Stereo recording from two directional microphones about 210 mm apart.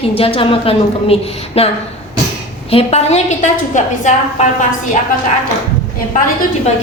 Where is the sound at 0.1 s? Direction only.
25° left (ahead or behind).